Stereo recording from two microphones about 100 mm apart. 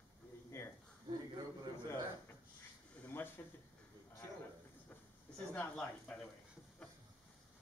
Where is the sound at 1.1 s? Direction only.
45° right (ahead or behind).